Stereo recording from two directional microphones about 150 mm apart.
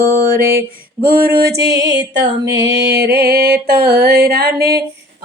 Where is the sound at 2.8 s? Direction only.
90° right.